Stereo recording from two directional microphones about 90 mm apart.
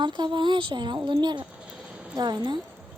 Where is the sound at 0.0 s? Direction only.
60° right (ahead or behind).